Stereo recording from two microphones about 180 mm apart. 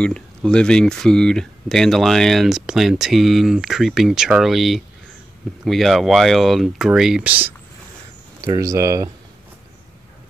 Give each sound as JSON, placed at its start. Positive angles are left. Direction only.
{"t": 0.0, "sound": "speech", "side_deg": 5}
{"t": 8.4, "sound": "speech", "side_deg": -20}